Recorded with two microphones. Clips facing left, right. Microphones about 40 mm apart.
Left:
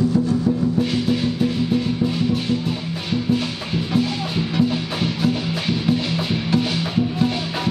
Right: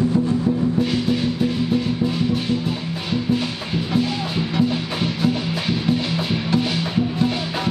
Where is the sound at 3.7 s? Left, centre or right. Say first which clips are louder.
Even; centre.